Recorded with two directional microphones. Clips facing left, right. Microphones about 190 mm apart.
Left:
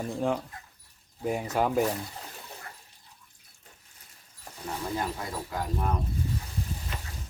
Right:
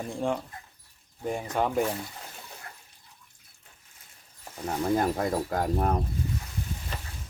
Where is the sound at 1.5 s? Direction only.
5° left (ahead or behind).